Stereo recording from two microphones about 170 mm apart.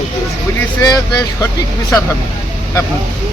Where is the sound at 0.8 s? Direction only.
20° left (ahead or behind).